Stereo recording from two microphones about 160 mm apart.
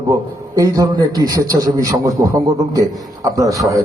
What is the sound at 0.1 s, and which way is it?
A man's voice, 20° right (ahead or behind).